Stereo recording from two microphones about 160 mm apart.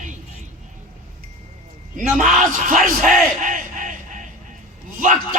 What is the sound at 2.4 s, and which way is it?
Speech, 55° right (ahead or behind).